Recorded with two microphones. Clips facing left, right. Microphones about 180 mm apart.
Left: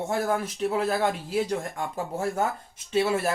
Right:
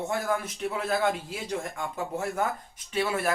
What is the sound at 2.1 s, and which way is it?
Speech, 25° left (ahead or behind).